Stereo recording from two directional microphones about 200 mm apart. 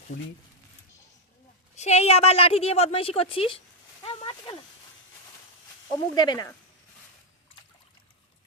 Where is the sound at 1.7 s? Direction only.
35° left (ahead or behind).